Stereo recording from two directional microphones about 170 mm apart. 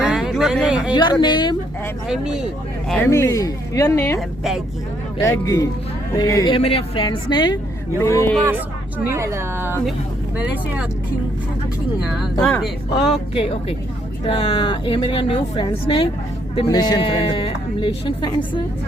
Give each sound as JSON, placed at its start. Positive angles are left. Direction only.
{"t": 0.0, "sound": "a sound", "side_deg": -5}
{"t": 0.9, "sound": "a woman's voice", "side_deg": 25}
{"t": 2.0, "sound": "speech", "side_deg": -5}
{"t": 2.9, "sound": "a woman's voice", "side_deg": 15}
{"t": 5.2, "sound": "a woman's voice", "side_deg": 20}
{"t": 6.5, "sound": "a woman's voice", "side_deg": 35}
{"t": 8.0, "sound": "a woman's voice", "side_deg": 15}
{"t": 9.0, "sound": "speech", "side_deg": -15}
{"t": 12.5, "sound": "speech", "side_deg": 0}
{"t": 13.3, "sound": "a woman's voice", "side_deg": 35}